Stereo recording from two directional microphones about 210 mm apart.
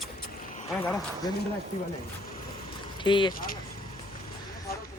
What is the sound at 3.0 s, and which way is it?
Speech, 20° left (ahead or behind).